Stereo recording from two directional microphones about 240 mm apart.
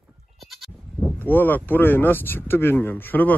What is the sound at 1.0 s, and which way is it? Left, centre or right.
Speech, centre.